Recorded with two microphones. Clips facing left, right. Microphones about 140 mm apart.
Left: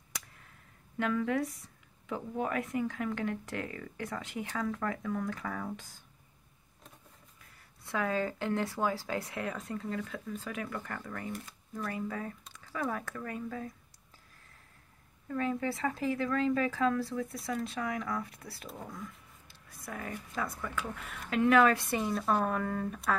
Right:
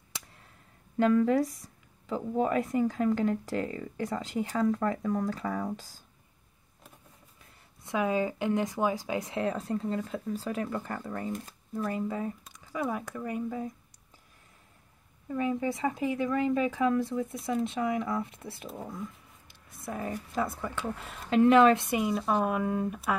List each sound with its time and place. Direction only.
0.9 s speech: 35° right (ahead or behind)
7.8 s speech: 20° right (ahead or behind)
15.2 s speech: 15° right (ahead or behind)
22.0 s speech: 5° right (ahead or behind)